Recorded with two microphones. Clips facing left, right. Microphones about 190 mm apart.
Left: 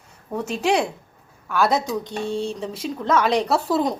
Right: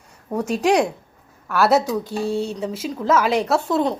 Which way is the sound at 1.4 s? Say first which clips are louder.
Right 3 dB; 5° right (ahead or behind).